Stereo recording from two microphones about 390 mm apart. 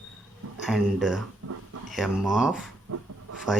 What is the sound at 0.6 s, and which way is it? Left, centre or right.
Speech, centre.